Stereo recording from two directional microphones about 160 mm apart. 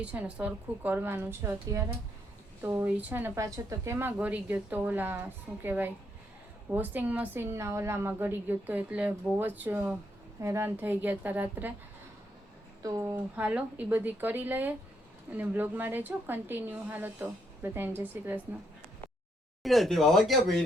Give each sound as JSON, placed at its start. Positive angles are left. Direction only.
{"t": 0.0, "sound": "a woman's voice", "side_deg": -10}
{"t": 12.8, "sound": "a woman's voice", "side_deg": -20}
{"t": 19.6, "sound": "speech", "side_deg": 0}